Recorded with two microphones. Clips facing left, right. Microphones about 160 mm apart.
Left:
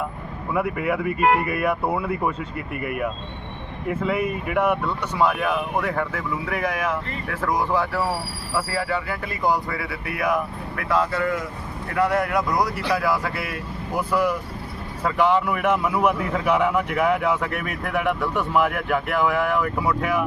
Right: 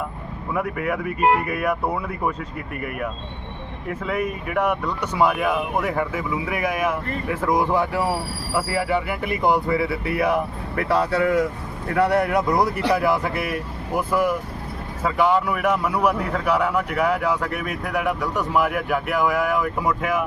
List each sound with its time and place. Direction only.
0.5 s a man's voice: centre (ahead or behind); by 11.0 s 30° right (ahead or behind)
11.1 s speech: 60° right (ahead or behind)
12.0 s speech: 30° right (ahead or behind)
13.9 s a man's voice: 10° right (ahead or behind)